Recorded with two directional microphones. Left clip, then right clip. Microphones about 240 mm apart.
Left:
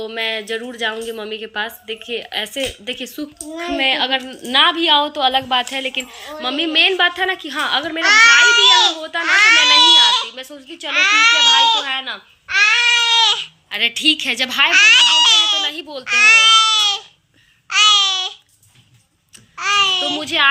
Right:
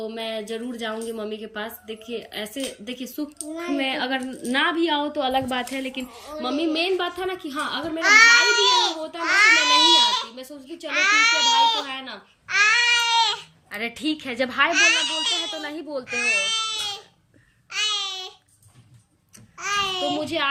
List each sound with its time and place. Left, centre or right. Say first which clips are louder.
0.1 s a woman's voice: left 8 dB; centre
7.9 s a child's voice: left 4 dB; centre
11.9 s a woman's voice: left 10 dB; centre
12.5 s baby cry: left 5 dB; left
13.7 s a child's voice: left 12 dB; centre
16.1 s baby cry: left 13 dB; centre
17.7 s babbling: left 13 dB; centre
19.5 s a child's voice: left 9 dB; centre
20.1 s a woman's voice: left 9 dB; centre